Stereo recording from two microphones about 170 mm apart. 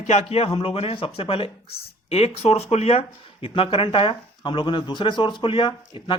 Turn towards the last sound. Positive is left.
turn(degrees=30)  # may be behind; listen again after turning